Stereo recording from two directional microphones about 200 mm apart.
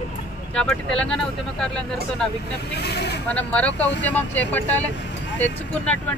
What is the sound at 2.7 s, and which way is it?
Speech, 55° left (ahead or behind).